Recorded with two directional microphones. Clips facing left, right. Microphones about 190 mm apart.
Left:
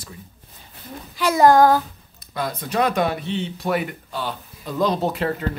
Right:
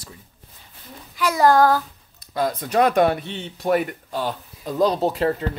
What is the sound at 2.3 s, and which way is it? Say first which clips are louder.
Speech: right 4 dB; 40° right (ahead or behind).